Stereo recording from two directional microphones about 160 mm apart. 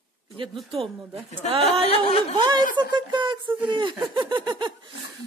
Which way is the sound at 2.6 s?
60° left (ahead or behind).